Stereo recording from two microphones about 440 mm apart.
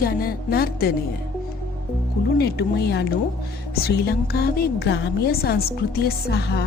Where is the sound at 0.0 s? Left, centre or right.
Centre.